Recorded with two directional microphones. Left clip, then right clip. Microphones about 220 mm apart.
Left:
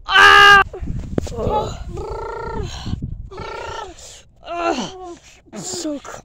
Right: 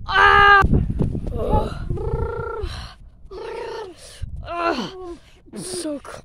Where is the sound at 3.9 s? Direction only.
5° left (ahead or behind).